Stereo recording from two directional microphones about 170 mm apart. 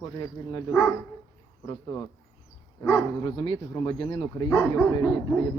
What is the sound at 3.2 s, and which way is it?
Speech, 30° left (ahead or behind).